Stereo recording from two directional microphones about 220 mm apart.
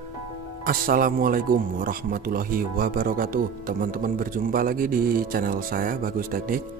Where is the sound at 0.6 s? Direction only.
40° right (ahead or behind).